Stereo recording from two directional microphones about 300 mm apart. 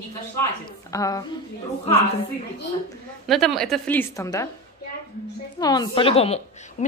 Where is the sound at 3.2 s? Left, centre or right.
Centre.